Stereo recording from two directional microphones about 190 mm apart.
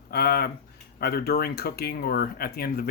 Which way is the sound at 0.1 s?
55° left (ahead or behind).